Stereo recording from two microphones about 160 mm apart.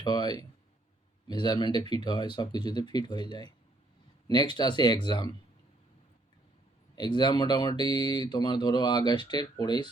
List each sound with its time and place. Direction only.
0.0 s speech: 25° left (ahead or behind)
6.9 s speech: 25° left (ahead or behind)